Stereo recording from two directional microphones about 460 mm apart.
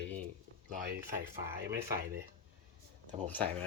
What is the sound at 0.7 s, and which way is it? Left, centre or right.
Speech, centre.